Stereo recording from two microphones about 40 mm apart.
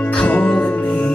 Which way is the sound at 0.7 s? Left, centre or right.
Left.